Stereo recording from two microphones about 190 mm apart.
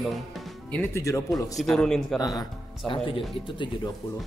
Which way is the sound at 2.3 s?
25° left (ahead or behind).